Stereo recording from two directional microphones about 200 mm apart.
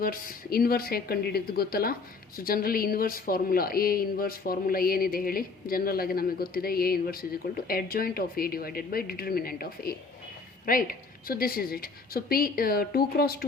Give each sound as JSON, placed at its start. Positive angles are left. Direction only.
{"t": 0.0, "sound": "speech", "side_deg": 45}